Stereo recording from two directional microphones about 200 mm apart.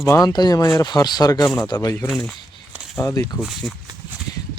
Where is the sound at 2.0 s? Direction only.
Centre (ahead or behind).